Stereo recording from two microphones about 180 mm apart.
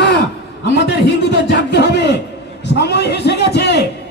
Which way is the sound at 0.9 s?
70° left (ahead or behind).